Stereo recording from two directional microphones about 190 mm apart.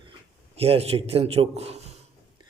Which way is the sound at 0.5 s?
30° right (ahead or behind).